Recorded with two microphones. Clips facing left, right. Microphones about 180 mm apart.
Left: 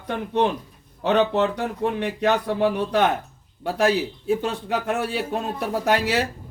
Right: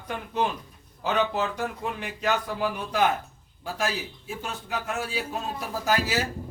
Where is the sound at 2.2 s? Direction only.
30° left (ahead or behind).